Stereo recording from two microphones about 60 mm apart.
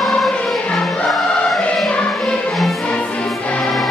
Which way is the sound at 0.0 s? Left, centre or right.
Centre.